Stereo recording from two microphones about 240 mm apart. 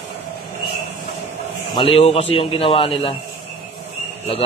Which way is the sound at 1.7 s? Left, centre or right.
Left.